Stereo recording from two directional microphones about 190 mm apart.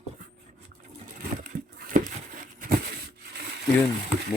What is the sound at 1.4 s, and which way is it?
Crumpling, 45° right (ahead or behind).